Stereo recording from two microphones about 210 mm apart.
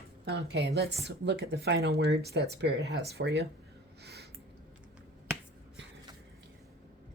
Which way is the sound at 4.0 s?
50° right (ahead or behind).